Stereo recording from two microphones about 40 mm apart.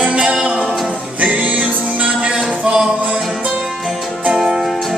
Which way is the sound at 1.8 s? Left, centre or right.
Right.